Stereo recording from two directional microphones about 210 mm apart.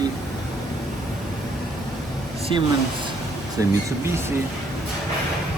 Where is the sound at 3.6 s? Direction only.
15° right (ahead or behind).